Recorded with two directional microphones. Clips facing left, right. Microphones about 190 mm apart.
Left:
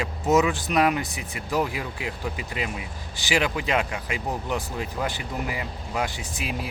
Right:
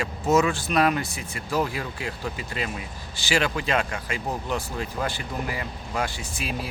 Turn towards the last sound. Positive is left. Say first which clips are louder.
# even
turn(degrees=20)  # may be behind; listen again after turning